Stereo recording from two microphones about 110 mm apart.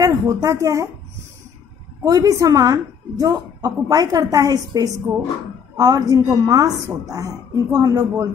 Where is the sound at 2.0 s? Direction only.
30° right (ahead or behind).